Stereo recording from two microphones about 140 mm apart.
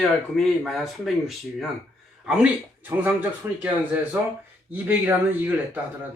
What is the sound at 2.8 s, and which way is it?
A man's voice, 10° right (ahead or behind).